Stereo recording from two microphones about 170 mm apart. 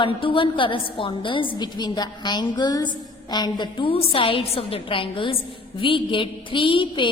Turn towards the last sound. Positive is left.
turn(degrees=30)  # may be behind; listen again after turning